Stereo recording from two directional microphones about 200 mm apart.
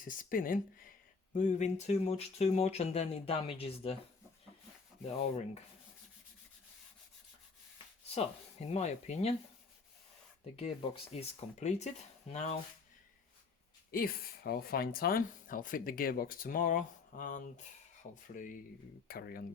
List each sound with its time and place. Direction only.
0.0 s speech: 45° left (ahead or behind)
8.1 s speech: 30° left (ahead or behind)
10.6 s speech: 30° left (ahead or behind)
13.9 s speech: 50° left (ahead or behind)